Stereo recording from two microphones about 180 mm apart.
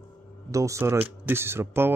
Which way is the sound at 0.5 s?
15° right (ahead or behind).